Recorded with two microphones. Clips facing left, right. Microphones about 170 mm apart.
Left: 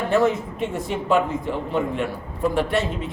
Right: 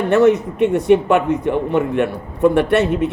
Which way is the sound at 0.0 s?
75° right (ahead or behind).